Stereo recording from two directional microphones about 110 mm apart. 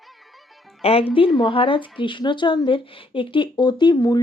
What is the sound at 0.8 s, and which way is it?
Speech, 60° left (ahead or behind).